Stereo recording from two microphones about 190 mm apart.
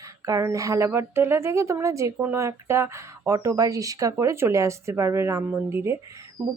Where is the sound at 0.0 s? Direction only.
15° right (ahead or behind).